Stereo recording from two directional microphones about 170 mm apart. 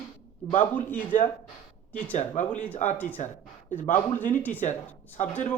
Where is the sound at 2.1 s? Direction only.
45° left (ahead or behind).